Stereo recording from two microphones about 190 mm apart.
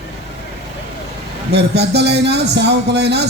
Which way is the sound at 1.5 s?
60° right (ahead or behind).